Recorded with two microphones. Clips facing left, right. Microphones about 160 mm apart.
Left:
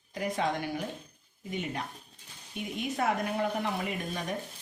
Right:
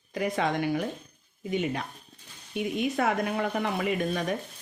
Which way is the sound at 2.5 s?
90° right.